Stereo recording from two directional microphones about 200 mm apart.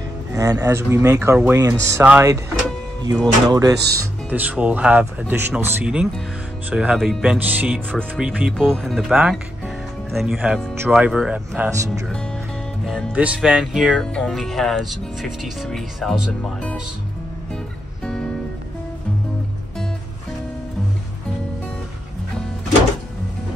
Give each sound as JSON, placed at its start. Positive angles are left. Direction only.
{"t": 0.3, "sound": "speech", "side_deg": -15}
{"t": 3.4, "sound": "speech", "side_deg": -15}
{"t": 18.0, "sound": "music", "side_deg": 5}